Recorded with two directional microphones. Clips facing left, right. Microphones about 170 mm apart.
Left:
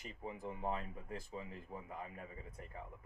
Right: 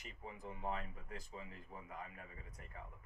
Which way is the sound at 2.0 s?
30° left (ahead or behind).